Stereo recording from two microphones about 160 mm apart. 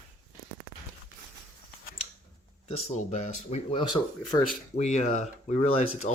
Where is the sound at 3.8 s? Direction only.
25° left (ahead or behind).